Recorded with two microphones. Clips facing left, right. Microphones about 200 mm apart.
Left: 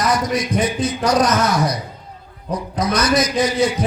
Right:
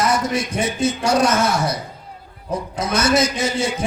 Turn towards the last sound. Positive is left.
turn(degrees=-25)  # may be behind; listen again after turning